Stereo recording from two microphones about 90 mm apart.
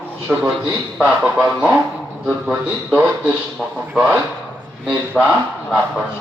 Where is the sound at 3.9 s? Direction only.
5° right (ahead or behind).